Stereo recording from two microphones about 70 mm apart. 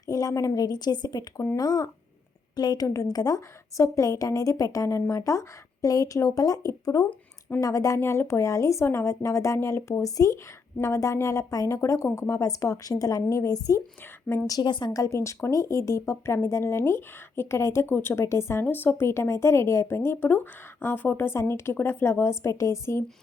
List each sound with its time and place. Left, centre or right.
0.0 s speech: left
2.6 s a woman's voice: left
2.8 s a woman's voice: left
7.9 s a woman's voice: left
14.5 s a woman's voice: left
15.0 s a woman's voice: left
18.7 s speech: left
20.0 s speech: left